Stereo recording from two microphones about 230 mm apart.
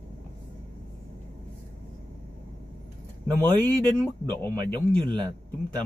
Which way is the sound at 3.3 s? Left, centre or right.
Centre.